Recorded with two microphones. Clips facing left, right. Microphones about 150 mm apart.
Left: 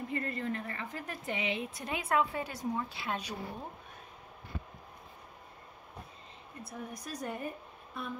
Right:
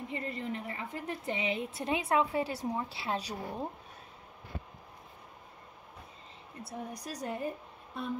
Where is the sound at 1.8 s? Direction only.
25° right (ahead or behind).